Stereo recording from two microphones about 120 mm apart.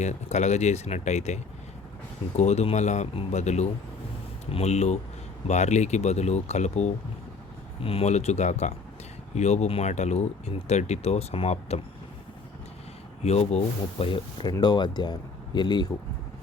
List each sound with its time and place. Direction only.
0.0 s speech: 70° left (ahead or behind)
13.2 s speech: 60° left (ahead or behind)
14.0 s speech: 45° left (ahead or behind)
14.6 s speech: 35° left (ahead or behind)